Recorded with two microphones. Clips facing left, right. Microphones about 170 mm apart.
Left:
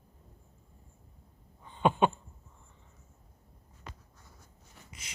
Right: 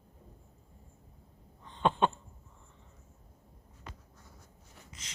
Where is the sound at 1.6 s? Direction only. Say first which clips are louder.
Left 2 dB; 10° left (ahead or behind).